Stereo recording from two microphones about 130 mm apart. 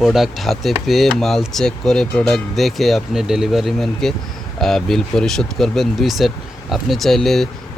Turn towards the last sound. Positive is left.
turn(degrees=0)  # may be behind; listen again after turning